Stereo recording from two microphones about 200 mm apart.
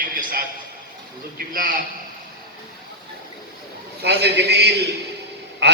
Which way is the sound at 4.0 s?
55° right (ahead or behind).